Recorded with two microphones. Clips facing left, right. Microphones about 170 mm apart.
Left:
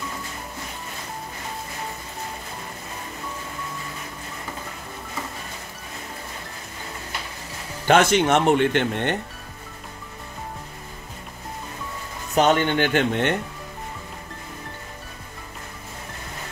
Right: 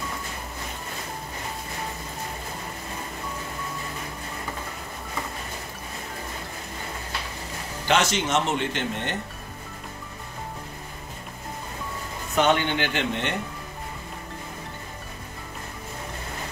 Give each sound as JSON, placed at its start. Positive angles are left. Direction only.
{"t": 7.8, "sound": "speech", "side_deg": 55}
{"t": 12.4, "sound": "speech", "side_deg": 45}